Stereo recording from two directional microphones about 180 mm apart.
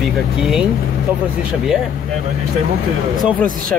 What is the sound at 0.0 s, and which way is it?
Speech, centre (ahead or behind).